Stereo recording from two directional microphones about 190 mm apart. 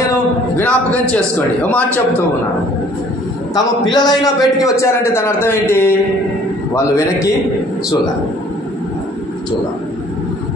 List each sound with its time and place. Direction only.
0.6 s a man's voice: 10° left (ahead or behind)
3.5 s a man's voice: 20° left (ahead or behind)